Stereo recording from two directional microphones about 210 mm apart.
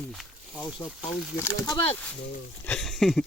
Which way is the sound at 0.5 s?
15° left (ahead or behind).